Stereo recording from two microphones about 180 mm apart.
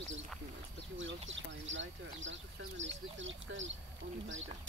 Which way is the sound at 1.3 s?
90° right.